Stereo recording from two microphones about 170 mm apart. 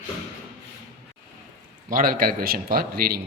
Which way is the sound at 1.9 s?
55° right (ahead or behind).